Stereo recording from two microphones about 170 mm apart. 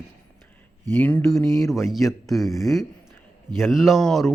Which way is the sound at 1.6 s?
Centre (ahead or behind).